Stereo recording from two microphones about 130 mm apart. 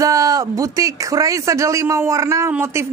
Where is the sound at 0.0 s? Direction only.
25° right (ahead or behind).